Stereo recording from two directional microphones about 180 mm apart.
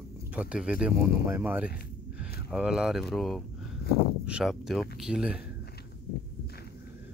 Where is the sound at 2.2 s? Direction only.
5° right (ahead or behind).